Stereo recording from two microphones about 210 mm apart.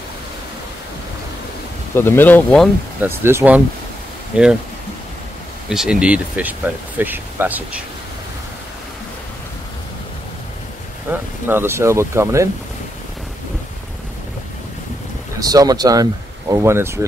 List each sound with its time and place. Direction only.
2.0 s speech: 10° left (ahead or behind)
3.0 s speech: 10° right (ahead or behind)
5.7 s speech: 5° right (ahead or behind)
11.1 s speech: 10° right (ahead or behind)
15.3 s speech: 15° right (ahead or behind)